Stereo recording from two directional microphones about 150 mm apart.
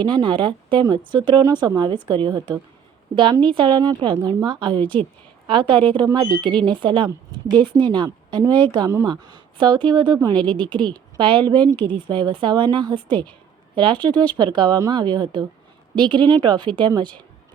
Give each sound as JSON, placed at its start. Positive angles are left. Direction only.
{"t": 0.0, "sound": "speech", "side_deg": -30}